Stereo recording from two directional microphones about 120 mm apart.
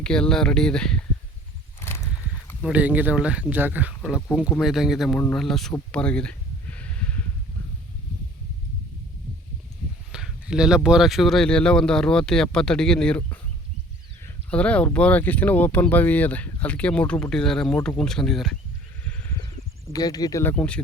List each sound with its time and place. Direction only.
0.0 s speech: 5° left (ahead or behind)
1.8 s a sound: 20° left (ahead or behind)
2.7 s speech: 15° right (ahead or behind)
4.6 s speech: 5° right (ahead or behind)
5.9 s a sound: 10° left (ahead or behind)
10.1 s speech: 5° right (ahead or behind); by 13.4 s 10° left (ahead or behind)
14.5 s speech: 10° left (ahead or behind)
19.9 s speech: 30° left (ahead or behind)
20.4 s speech: 15° left (ahead or behind)